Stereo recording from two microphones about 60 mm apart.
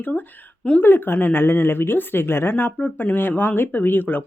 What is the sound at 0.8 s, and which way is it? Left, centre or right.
Speech, left.